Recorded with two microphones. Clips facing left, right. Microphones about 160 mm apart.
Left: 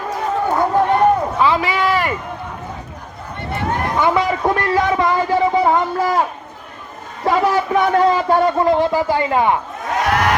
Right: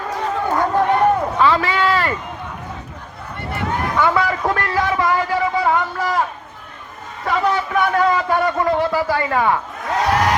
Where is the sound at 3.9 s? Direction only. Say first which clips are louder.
Left 1 dB; 20° left (ahead or behind).